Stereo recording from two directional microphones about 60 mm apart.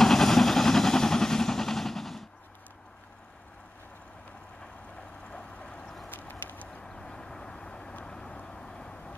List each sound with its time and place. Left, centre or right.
0.0 s vehicle: centre
5.3 s vehicle: centre
6.0 s a sound: left
6.8 s vehicle: centre